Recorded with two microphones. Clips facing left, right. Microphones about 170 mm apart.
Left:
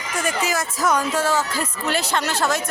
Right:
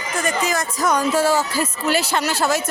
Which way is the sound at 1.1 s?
10° right (ahead or behind).